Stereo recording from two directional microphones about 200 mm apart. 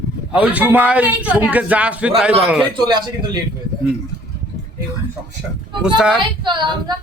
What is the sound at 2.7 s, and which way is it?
Speech, 20° right (ahead or behind).